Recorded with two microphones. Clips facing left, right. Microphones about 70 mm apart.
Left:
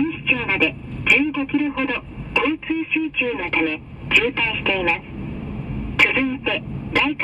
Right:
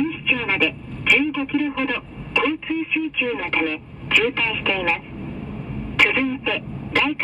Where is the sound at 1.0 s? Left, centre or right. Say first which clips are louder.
Left 1 dB; left.